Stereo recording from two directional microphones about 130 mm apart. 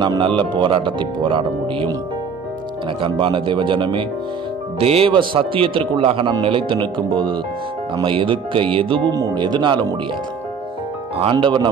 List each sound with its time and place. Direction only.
0.0 s speech: 35° right (ahead or behind)
3.0 s a man's voice: 40° right (ahead or behind)
11.1 s speech: 40° right (ahead or behind)